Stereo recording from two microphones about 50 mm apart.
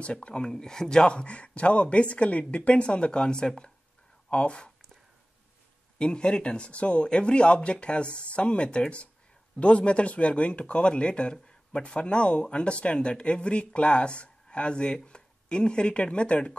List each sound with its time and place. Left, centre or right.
0.0 s speech: left
5.9 s speech: centre